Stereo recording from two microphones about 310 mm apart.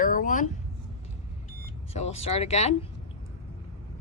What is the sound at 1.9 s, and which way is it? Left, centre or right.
Speech, centre.